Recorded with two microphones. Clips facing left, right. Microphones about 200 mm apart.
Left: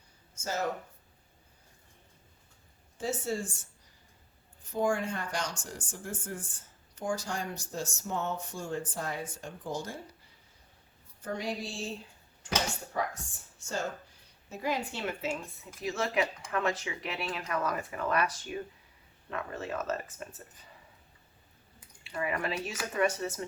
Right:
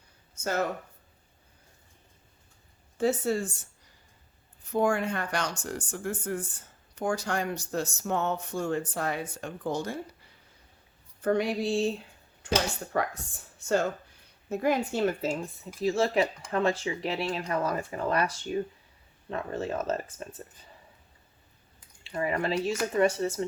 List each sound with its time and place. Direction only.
0.3 s speech: 60° right (ahead or behind)
3.0 s speech: 65° right (ahead or behind)
4.7 s speech: 65° right (ahead or behind)
11.2 s speech: 60° right (ahead or behind)
13.6 s speech: 60° right (ahead or behind); by 20.2 s 30° right (ahead or behind)
22.1 s speech: 35° right (ahead or behind)